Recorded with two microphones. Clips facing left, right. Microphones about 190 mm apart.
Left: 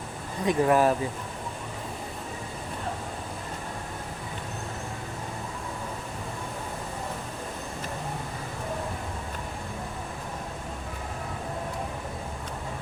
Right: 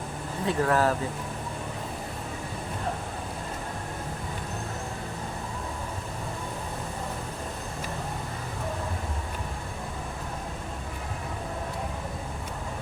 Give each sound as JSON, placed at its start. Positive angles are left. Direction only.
{"t": 0.4, "sound": "speech", "side_deg": 15}